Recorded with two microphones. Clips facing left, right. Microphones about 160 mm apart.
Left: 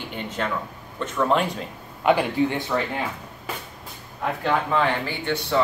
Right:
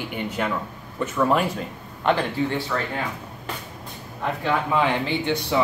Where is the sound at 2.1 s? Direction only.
15° left (ahead or behind).